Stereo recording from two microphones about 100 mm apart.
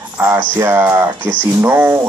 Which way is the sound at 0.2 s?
20° right (ahead or behind).